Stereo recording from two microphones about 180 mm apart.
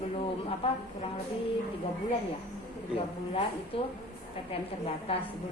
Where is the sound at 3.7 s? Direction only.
30° left (ahead or behind).